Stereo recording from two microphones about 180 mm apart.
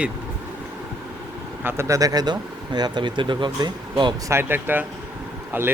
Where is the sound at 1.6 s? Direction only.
15° right (ahead or behind).